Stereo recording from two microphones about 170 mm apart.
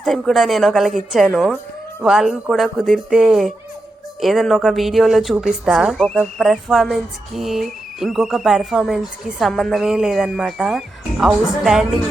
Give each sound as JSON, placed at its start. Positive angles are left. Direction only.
{"t": 0.0, "sound": "speech", "side_deg": 0}